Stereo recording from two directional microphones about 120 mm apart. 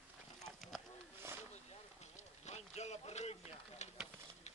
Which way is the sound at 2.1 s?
70° left (ahead or behind).